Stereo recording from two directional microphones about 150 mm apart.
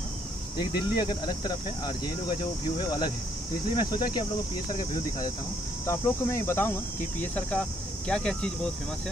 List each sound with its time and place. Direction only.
0.6 s speech: 30° left (ahead or behind)
5.9 s speech: 15° left (ahead or behind)